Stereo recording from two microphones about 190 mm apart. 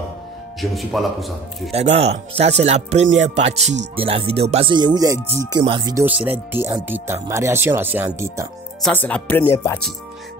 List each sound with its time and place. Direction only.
0.6 s speech: centre (ahead or behind)
2.0 s speech: 35° right (ahead or behind)
6.0 s speech: 5° right (ahead or behind)
8.8 s speech: 5° left (ahead or behind)